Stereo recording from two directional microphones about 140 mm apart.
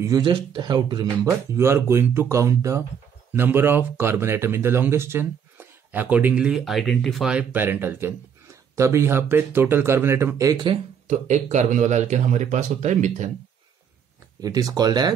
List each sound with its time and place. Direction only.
0.2 s speech: 35° right (ahead or behind)
1.5 s speech: 20° right (ahead or behind)
11.1 s speech: 55° right (ahead or behind)
14.4 s speech: 25° right (ahead or behind)